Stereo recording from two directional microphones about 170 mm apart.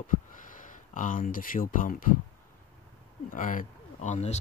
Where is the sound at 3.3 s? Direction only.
50° left (ahead or behind).